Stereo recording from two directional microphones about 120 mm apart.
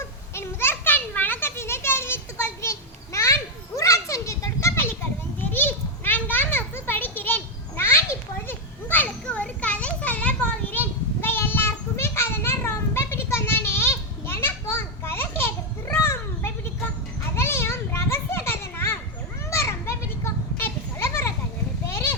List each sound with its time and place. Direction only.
0.3 s children playing: 20° left (ahead or behind)
11.2 s child singing: 20° left (ahead or behind)
17.3 s children playing: 20° left (ahead or behind)
21.8 s a sound: 25° left (ahead or behind)